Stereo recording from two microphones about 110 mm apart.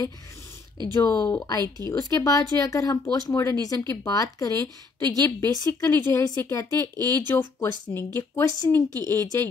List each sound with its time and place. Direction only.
1.0 s speech: 25° left (ahead or behind)